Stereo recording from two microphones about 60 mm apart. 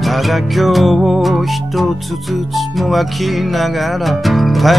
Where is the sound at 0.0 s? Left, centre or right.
Centre.